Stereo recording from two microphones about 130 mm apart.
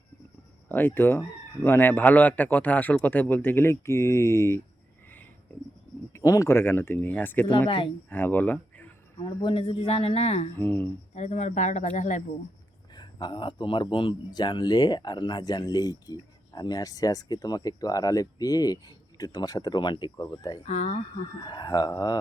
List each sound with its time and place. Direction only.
0.7 s a man's voice: 15° left (ahead or behind)
6.1 s a man's voice: 25° left (ahead or behind)
9.4 s speech: 40° left (ahead or behind)
10.6 s a man's voice: 15° left (ahead or behind)
11.1 s speech: 60° left (ahead or behind)
12.9 s speech: 35° left (ahead or behind)
20.7 s speech: 60° left (ahead or behind)
21.4 s speech: 30° left (ahead or behind)